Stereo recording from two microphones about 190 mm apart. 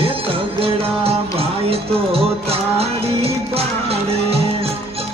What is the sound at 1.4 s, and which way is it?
Music, 30° right (ahead or behind).